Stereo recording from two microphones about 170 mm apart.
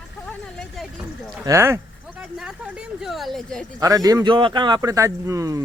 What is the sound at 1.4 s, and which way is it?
Speech, 15° right (ahead or behind).